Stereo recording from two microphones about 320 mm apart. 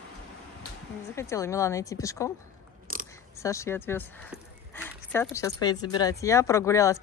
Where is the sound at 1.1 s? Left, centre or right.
Centre.